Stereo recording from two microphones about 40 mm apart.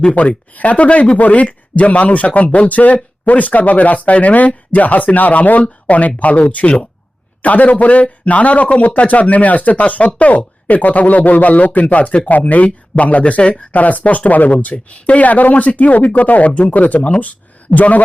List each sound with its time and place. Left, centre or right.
0.2 s speech: left